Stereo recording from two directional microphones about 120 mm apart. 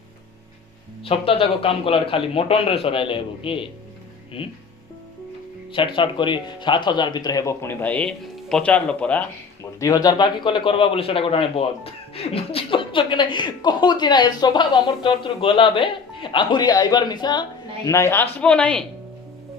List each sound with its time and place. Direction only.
1.0 s a man's voice: 50° left (ahead or behind)
5.7 s a man's voice: 45° left (ahead or behind); by 9.2 s 10° left (ahead or behind)
9.8 s a man's voice: 30° left (ahead or behind)
17.8 s a man's voice: 25° left (ahead or behind)
18.3 s speech: 10° left (ahead or behind)